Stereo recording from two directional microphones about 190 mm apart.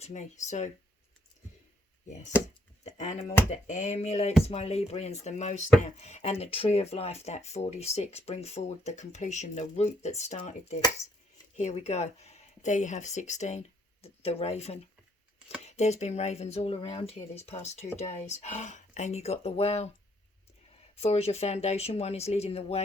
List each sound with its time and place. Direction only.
0.0 s speech: 40° left (ahead or behind)
2.8 s speech: 35° left (ahead or behind)
20.9 s speech: 35° left (ahead or behind)